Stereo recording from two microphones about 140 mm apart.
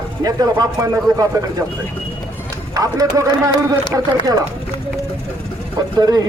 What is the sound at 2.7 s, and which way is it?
A man's voice, 25° right (ahead or behind).